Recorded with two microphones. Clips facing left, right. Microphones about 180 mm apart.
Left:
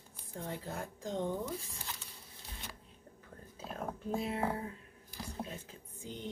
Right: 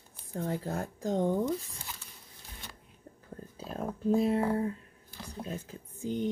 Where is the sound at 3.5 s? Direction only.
35° right (ahead or behind).